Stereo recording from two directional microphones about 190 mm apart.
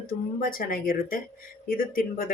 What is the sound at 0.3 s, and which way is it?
Speech, 50° left (ahead or behind).